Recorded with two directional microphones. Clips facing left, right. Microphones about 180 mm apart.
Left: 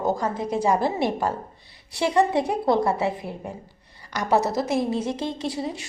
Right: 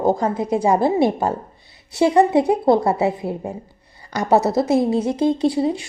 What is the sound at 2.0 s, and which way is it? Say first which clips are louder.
Speech: right 6 dB; 25° right (ahead or behind).